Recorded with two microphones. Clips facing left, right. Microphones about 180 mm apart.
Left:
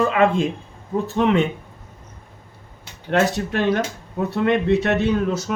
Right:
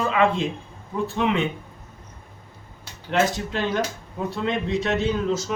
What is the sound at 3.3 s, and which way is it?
A man's voice, 60° left (ahead or behind).